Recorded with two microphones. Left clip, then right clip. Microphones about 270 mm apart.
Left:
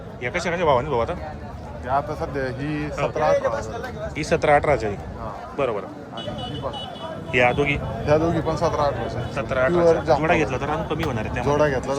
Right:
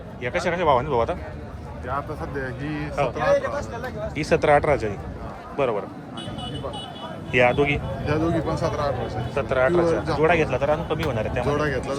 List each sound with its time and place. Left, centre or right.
0.2 s speech: centre
1.9 s a man's voice: left
4.2 s speech: centre
7.3 s speech: centre
8.0 s a man's voice: left
9.3 s speech: centre
11.4 s a man's voice: left